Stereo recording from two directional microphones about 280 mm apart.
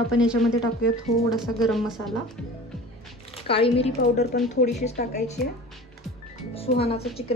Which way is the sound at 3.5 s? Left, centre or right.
Centre.